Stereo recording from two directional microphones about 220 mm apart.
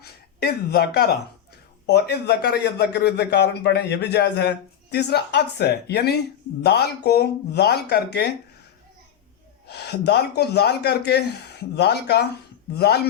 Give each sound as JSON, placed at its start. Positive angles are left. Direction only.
{"t": 0.0, "sound": "a man's voice", "side_deg": 45}
{"t": 9.6, "sound": "a man's voice", "side_deg": 45}